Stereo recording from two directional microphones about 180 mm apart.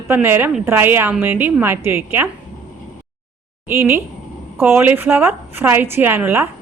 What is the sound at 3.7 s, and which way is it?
A woman's voice, 15° right (ahead or behind).